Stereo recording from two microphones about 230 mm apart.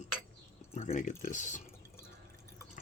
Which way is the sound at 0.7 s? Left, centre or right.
Left.